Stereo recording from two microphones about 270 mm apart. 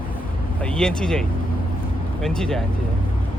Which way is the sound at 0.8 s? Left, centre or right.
Centre.